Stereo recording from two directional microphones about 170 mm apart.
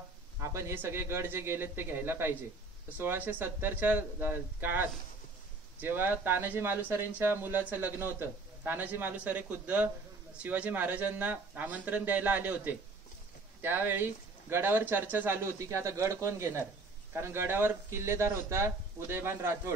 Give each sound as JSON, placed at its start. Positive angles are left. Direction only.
{"t": 0.4, "sound": "speech", "side_deg": -15}